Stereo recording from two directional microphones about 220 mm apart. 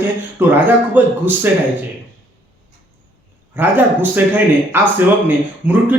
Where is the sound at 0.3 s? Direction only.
10° right (ahead or behind).